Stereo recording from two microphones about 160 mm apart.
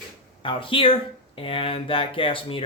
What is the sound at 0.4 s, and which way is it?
Speech, 35° left (ahead or behind).